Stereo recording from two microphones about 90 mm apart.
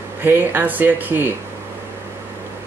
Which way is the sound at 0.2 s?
25° right (ahead or behind).